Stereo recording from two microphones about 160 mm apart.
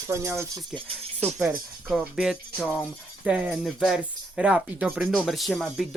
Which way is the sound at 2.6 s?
10° left (ahead or behind).